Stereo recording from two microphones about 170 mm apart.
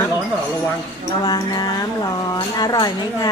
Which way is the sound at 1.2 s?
25° left (ahead or behind).